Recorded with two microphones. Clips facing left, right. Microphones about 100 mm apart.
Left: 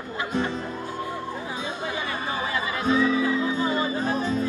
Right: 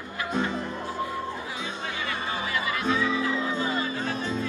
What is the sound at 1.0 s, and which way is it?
Chatter, 30° left (ahead or behind).